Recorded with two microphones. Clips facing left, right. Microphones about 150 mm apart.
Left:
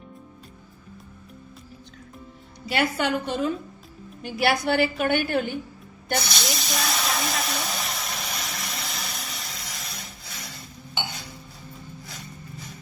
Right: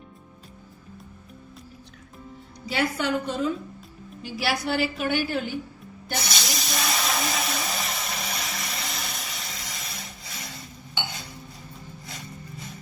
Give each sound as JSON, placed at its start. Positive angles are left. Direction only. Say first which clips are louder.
{"t": 2.6, "sound": "a woman's voice", "louder": "left 1 dB", "side_deg": 70}
{"t": 4.2, "sound": "a woman's voice", "louder": "left 4 dB", "side_deg": 55}
{"t": 6.1, "sound": "hiss", "louder": "left 2 dB", "side_deg": 0}